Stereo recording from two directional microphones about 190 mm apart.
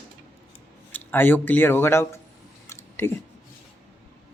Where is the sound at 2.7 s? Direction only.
15° left (ahead or behind).